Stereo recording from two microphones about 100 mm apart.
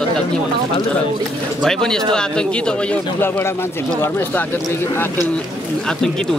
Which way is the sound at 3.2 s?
20° left (ahead or behind).